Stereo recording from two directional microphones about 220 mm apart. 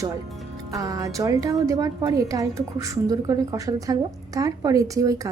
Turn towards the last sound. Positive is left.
turn(degrees=-15)  # may be behind; listen again after turning